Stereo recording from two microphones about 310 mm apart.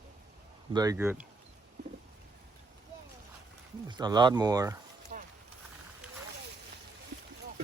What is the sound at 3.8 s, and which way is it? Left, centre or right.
Speech, centre.